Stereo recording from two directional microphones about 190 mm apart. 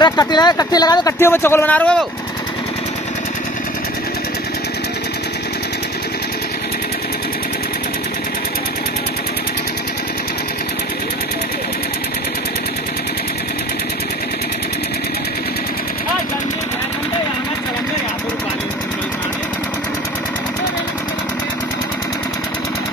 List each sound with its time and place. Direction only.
0.0 s speech: 20° left (ahead or behind); by 2.0 s 5° left (ahead or behind)